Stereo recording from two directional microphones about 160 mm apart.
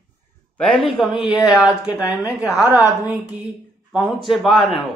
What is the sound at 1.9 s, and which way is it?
Speech, 10° right (ahead or behind).